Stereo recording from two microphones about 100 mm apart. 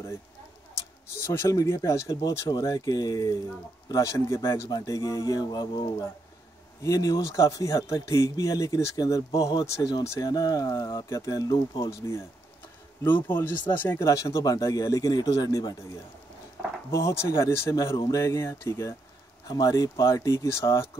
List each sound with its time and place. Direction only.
1.2 s speech: 30° left (ahead or behind)
13.0 s speech: 20° left (ahead or behind); by 15.7 s 35° left (ahead or behind)
16.9 s speech: 30° left (ahead or behind)
19.4 s speech: 40° left (ahead or behind)